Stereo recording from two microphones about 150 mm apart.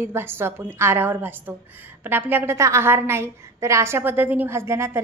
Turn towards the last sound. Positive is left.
turn(degrees=-15)  # may be behind; listen again after turning